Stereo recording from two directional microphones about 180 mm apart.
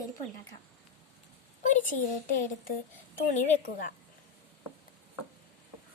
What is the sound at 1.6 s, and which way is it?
Speech, 45° left (ahead or behind).